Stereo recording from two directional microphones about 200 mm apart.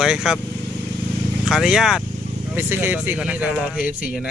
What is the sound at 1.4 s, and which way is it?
Speech, centre (ahead or behind).